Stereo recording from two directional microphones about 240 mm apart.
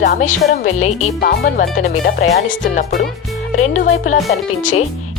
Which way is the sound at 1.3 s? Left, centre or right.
Left.